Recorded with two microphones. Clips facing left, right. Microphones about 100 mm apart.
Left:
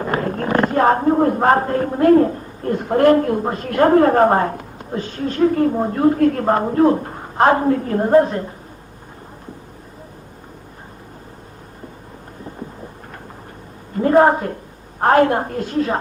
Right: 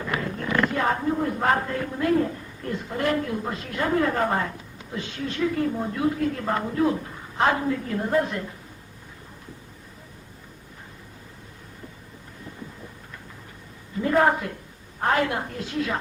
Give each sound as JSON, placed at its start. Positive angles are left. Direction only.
{"t": 0.0, "sound": "speech", "side_deg": 45}
{"t": 13.9, "sound": "a woman's voice", "side_deg": 40}